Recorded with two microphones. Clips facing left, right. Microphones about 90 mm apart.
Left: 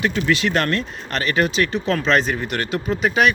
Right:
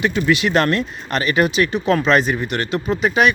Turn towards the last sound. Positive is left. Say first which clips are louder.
# right 2 dB
turn(degrees=0)  # may be behind; listen again after turning